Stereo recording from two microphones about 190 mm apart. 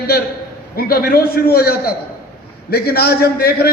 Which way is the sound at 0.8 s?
55° left (ahead or behind).